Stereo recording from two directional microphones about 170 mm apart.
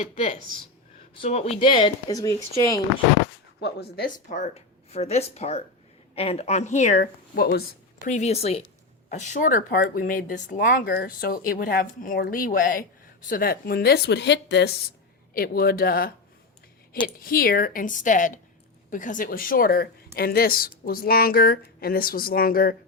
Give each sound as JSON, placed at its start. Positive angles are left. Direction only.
{"t": 0.0, "sound": "speech", "side_deg": 45}
{"t": 3.6, "sound": "a woman's voice", "side_deg": 70}
{"t": 4.3, "sound": "speech", "side_deg": 45}
{"t": 7.0, "sound": "speech", "side_deg": 65}
{"t": 8.0, "sound": "a woman's voice", "side_deg": 45}
{"t": 15.3, "sound": "speech", "side_deg": 60}
{"t": 17.2, "sound": "speech", "side_deg": 60}